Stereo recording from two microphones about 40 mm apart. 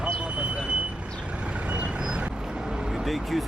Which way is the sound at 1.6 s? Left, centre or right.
Right.